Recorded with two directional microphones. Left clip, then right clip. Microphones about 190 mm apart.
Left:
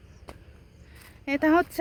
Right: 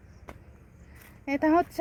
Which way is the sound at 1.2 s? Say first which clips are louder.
Left 2 dB; 5° left (ahead or behind).